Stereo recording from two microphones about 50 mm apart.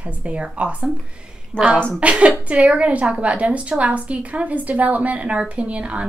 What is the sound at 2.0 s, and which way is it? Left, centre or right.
A woman's voice, right.